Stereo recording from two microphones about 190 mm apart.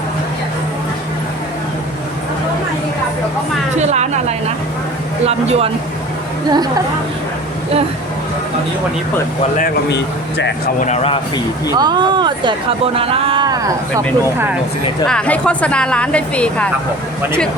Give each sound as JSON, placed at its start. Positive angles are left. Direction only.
{"t": 3.8, "sound": "speech", "side_deg": -35}
{"t": 9.9, "sound": "speech", "side_deg": 65}
{"t": 10.8, "sound": "speech", "side_deg": 35}
{"t": 11.7, "sound": "speech", "side_deg": -20}
{"t": 15.0, "sound": "speech", "side_deg": 5}